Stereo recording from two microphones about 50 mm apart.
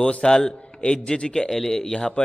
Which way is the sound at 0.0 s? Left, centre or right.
Centre.